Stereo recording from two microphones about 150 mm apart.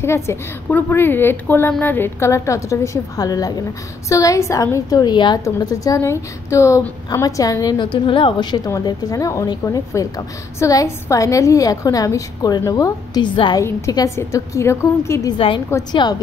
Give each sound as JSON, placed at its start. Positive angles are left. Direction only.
{"t": 0.0, "sound": "a woman's voice", "side_deg": 15}
{"t": 13.7, "sound": "a woman's voice", "side_deg": 20}
{"t": 15.3, "sound": "a woman's voice", "side_deg": 35}